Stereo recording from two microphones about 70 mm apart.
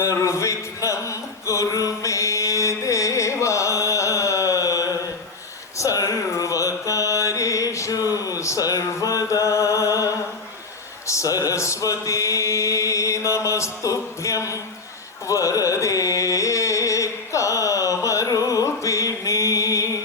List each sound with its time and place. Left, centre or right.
0.0 s a sound: left
5.7 s mantra: left
11.0 s chant: left
15.3 s carnatic music: left